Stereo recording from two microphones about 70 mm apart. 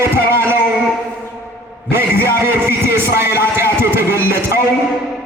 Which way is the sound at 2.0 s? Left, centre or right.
Right.